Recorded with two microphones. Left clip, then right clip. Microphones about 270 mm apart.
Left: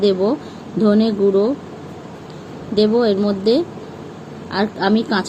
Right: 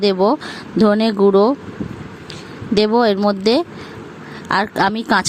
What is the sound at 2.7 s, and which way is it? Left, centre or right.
A woman's voice, right.